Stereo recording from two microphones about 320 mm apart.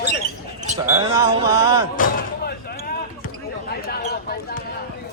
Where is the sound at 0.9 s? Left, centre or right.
Centre.